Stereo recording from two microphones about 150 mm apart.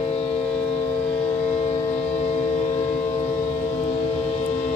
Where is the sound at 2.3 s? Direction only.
45° left (ahead or behind).